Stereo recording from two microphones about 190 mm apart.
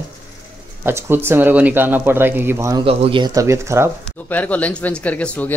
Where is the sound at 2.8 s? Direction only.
30° right (ahead or behind).